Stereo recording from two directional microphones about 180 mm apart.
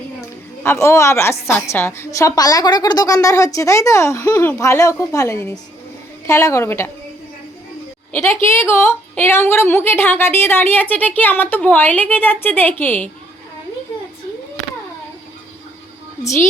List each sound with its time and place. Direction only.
0.6 s a woman's voice: 15° left (ahead or behind)
8.1 s a woman's voice: 15° left (ahead or behind)
16.2 s a woman's voice: 15° left (ahead or behind)